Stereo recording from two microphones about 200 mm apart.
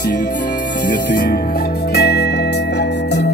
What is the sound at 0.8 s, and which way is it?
Music, 50° left (ahead or behind).